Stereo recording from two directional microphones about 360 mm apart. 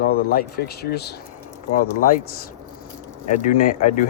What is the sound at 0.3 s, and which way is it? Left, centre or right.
Speech, left.